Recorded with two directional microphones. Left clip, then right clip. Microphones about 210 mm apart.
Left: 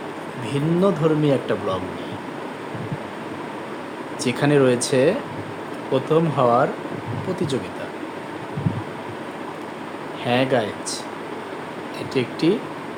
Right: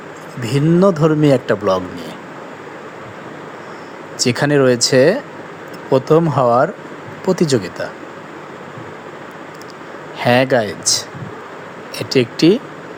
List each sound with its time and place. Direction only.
0.4 s a man's voice: 35° right (ahead or behind)
4.2 s a man's voice: 30° right (ahead or behind)
10.2 s a man's voice: 30° right (ahead or behind)